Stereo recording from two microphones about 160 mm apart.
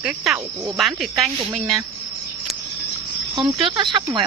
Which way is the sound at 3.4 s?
30° right (ahead or behind).